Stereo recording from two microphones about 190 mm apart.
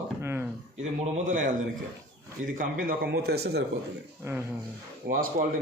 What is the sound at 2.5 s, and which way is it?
A man's voice, 55° right (ahead or behind).